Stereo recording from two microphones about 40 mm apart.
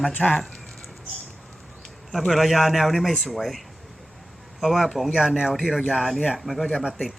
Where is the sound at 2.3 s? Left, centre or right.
Centre.